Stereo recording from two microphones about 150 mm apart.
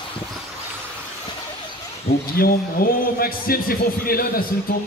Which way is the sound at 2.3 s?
80° left.